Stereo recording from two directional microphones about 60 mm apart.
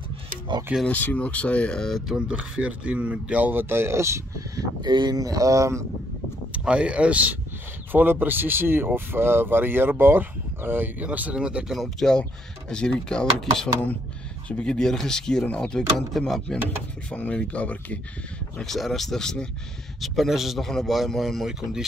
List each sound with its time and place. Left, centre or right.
0.8 s speech: left; by 2.0 s centre
2.0 s speech: centre
3.6 s speech: right
5.1 s speech: right
6.5 s speech: centre; by 11.1 s right
11.1 s speech: right
11.7 s speech: centre
15.4 s speech: left
16.1 s speech: centre
17.1 s speech: left
18.6 s speech: centre
20.0 s speech: centre
21.5 s speech: centre